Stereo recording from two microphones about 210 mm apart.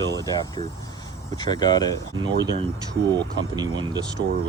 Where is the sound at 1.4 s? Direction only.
20° left (ahead or behind).